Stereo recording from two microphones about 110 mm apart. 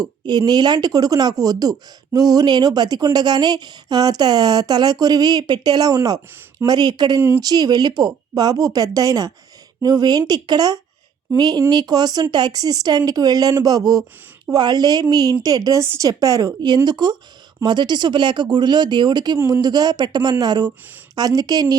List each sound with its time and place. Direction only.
0.0 s speech: 40° right (ahead or behind)
7.2 s speech: 20° right (ahead or behind)
7.4 s speech: 35° right (ahead or behind)